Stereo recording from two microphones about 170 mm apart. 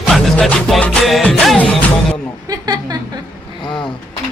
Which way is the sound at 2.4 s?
20° right (ahead or behind).